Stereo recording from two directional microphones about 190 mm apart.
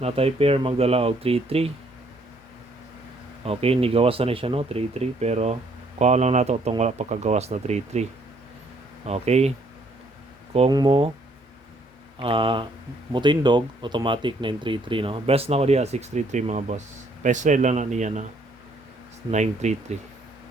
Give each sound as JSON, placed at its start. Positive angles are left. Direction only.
{"t": 0.0, "sound": "speech", "side_deg": -30}
{"t": 3.4, "sound": "speech", "side_deg": -30}
{"t": 9.0, "sound": "speech", "side_deg": -35}
{"t": 10.5, "sound": "speech", "side_deg": -30}
{"t": 12.2, "sound": "speech", "side_deg": -25}
{"t": 19.3, "sound": "speech", "side_deg": -40}